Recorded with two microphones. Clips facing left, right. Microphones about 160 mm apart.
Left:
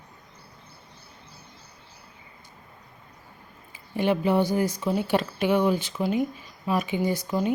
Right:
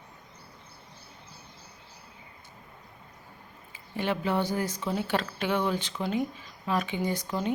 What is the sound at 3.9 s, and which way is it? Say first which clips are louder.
Speech: left 6 dB; 15° left (ahead or behind).